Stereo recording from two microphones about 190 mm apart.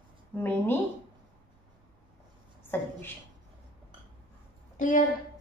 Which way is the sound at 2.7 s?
10° left (ahead or behind).